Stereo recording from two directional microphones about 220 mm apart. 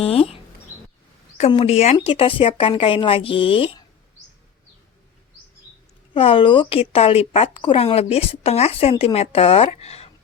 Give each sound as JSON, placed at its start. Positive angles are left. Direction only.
{"t": 0.0, "sound": "speech", "side_deg": 25}
{"t": 6.1, "sound": "speech", "side_deg": 25}